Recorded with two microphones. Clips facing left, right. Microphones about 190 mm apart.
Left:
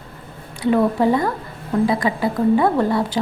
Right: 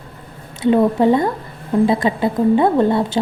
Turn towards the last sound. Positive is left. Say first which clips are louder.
# right 3 dB
turn(degrees=-25)  # may be behind; listen again after turning